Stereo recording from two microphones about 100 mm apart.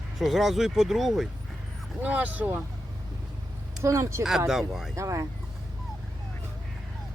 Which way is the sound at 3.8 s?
30° right (ahead or behind).